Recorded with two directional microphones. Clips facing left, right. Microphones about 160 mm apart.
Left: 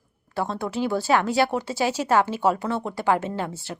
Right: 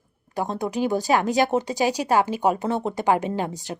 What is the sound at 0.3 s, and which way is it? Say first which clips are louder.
Speech: right 1 dB; 15° right (ahead or behind).